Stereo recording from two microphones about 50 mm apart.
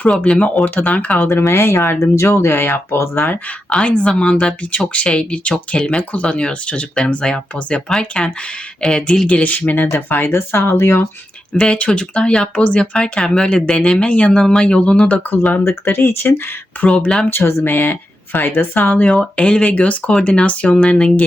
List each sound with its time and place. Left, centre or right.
0.3 s speech: left
1.3 s speech: left
3.7 s speech: left
9.2 s speech: left
9.8 s speech: left
11.5 s speech: centre
14.3 s speech: centre
14.6 s speech: left
15.8 s speech: left
16.8 s speech: left
17.2 s speech: left
19.0 s speech: centre
19.4 s speech: left